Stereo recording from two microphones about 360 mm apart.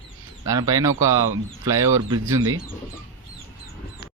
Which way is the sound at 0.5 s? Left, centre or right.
Centre.